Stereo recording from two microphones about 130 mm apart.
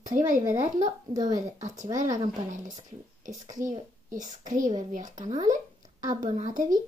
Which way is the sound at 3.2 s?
75° right (ahead or behind).